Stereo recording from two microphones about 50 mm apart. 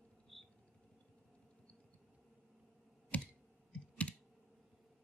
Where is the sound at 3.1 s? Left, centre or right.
Left.